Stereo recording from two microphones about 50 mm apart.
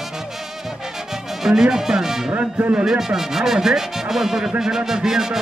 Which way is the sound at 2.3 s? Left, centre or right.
Right.